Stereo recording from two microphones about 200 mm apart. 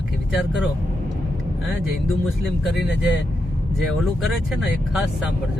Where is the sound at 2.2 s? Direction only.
Centre (ahead or behind).